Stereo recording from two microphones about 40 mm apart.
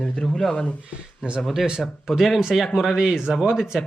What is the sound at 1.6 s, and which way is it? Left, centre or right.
Speech, centre.